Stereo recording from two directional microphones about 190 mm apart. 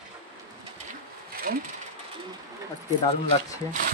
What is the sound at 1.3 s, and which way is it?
Sewing machine, 50° right (ahead or behind).